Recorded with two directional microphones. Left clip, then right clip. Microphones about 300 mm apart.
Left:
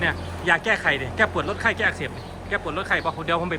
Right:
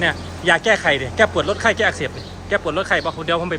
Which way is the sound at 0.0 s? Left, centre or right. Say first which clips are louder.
Right 5 dB; centre.